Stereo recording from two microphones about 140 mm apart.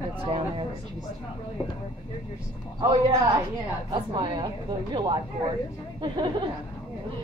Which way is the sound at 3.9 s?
35° right (ahead or behind).